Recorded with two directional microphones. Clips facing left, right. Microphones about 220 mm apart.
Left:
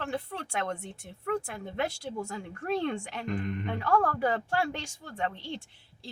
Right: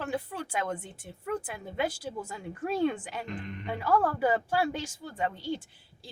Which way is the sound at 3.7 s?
5° right (ahead or behind).